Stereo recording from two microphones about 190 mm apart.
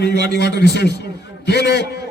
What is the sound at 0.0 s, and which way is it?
A man's voice, 60° left (ahead or behind).